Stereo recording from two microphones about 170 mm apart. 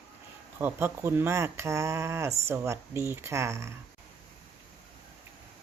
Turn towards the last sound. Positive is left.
turn(degrees=-15)  # may be behind; listen again after turning